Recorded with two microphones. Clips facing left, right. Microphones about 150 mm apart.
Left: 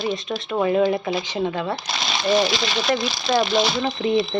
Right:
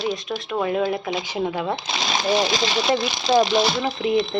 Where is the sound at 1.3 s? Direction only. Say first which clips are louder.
Right 3 dB; 10° right (ahead or behind).